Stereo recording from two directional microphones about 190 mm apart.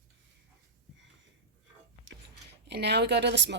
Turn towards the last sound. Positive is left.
turn(degrees=-65)  # may be behind; listen again after turning